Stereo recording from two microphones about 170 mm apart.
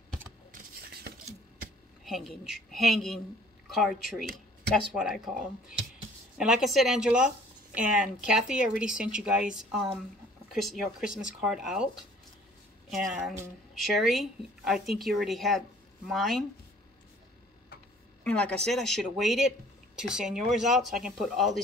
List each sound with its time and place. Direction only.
0.5 s scissors: 65° right (ahead or behind)
2.0 s speech: centre (ahead or behind)
12.9 s speech: 5° right (ahead or behind)
18.2 s speech: 5° left (ahead or behind)